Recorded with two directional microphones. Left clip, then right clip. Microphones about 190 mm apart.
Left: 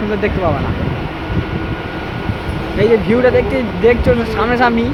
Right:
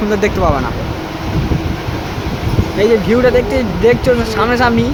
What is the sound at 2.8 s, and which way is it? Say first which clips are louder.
Speech: right 1 dB; 10° right (ahead or behind).